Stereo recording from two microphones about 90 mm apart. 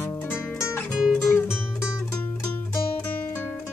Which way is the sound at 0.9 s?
Centre (ahead or behind).